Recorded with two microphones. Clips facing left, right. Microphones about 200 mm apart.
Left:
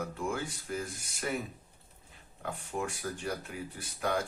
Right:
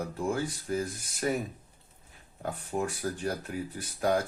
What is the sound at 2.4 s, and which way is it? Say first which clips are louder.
Speech: right 4 dB; 35° right (ahead or behind).